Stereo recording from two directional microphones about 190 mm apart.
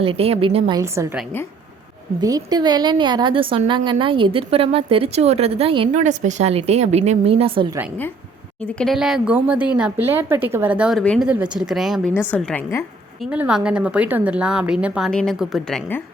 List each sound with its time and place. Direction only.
0.0 s a woman's voice: 30° right (ahead or behind)
2.2 s a woman's voice: 20° right (ahead or behind)
8.6 s a woman's voice: centre (ahead or behind)
11.0 s a woman's voice: 5° left (ahead or behind)
11.3 s a woman's voice: 5° right (ahead or behind)
13.3 s a woman's voice: 5° right (ahead or behind)